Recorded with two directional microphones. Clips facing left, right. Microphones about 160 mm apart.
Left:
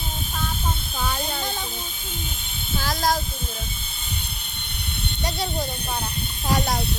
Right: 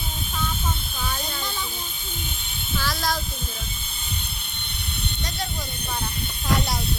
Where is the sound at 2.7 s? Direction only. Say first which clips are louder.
Left 3 dB; 50° left (ahead or behind).